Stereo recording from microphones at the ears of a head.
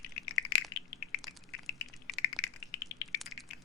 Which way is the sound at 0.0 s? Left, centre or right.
Left.